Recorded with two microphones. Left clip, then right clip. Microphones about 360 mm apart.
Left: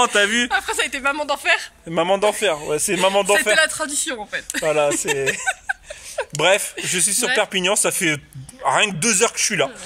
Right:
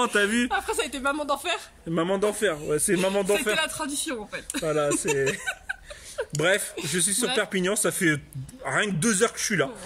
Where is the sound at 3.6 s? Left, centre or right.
Centre.